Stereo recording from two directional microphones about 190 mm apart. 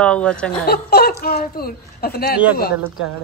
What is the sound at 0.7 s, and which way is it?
A woman's voice, 55° left (ahead or behind).